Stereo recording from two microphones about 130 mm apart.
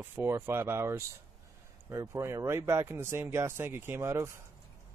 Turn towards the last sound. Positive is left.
turn(degrees=-20)  # may be behind; listen again after turning